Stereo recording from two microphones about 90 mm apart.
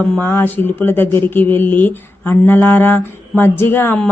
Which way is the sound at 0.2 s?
25° left (ahead or behind).